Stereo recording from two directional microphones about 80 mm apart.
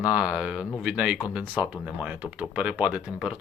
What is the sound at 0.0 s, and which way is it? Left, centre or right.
Speech, centre.